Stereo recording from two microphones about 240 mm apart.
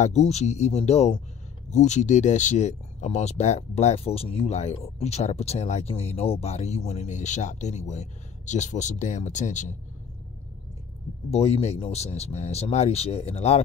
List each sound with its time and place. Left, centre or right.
0.0 s speech: left
11.2 s speech: left